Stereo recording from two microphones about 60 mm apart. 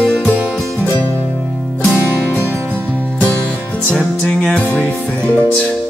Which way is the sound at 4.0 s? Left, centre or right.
Centre.